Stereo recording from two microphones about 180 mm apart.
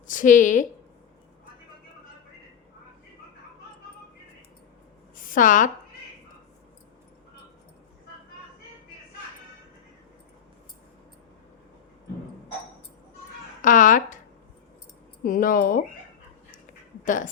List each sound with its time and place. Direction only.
0.1 s a woman's voice: 45° left (ahead or behind)
5.1 s a woman's voice: 50° left (ahead or behind)
13.6 s a woman's voice: 45° left (ahead or behind)
15.2 s a woman's voice: 50° left (ahead or behind)